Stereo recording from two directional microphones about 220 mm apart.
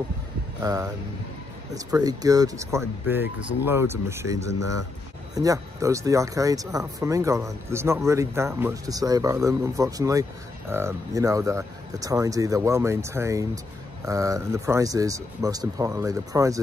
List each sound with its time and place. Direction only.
0.6 s speech: 15° right (ahead or behind)